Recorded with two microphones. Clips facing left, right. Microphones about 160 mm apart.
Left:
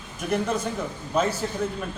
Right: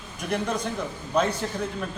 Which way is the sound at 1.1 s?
5° left (ahead or behind).